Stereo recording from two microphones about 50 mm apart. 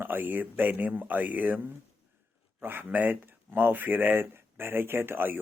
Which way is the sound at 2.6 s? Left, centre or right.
Right.